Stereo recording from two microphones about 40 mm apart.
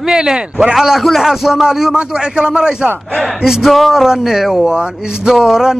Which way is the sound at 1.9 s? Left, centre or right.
Right.